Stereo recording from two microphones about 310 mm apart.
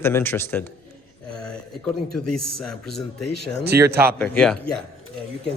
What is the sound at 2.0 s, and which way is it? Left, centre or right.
Speech, left.